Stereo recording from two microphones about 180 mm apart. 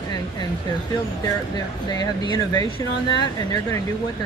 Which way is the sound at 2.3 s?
20° left (ahead or behind).